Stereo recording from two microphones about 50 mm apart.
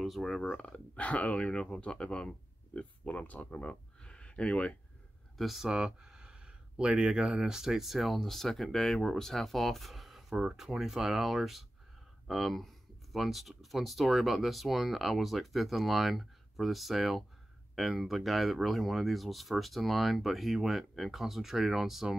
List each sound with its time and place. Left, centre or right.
0.0 s speech: centre
0.5 s speech: left
5.4 s speech: centre
5.7 s speech: centre